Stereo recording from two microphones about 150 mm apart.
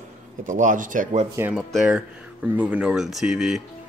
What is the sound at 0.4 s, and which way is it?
Speech, 60° right (ahead or behind).